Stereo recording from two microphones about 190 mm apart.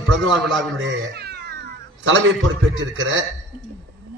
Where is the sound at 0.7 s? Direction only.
70° right (ahead or behind); by 2.4 s 90° right.